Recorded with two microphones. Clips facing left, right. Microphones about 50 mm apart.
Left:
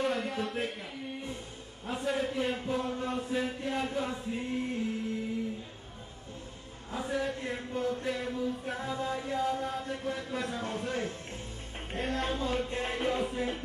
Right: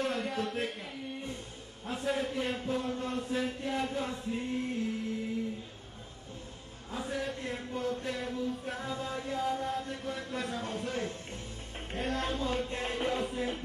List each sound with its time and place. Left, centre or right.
0.0 s a sound: centre
1.9 s chant: centre
6.9 s chant: centre
11.9 s music: centre